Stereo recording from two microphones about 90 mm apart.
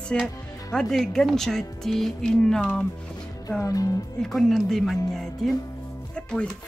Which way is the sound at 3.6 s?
40° left (ahead or behind).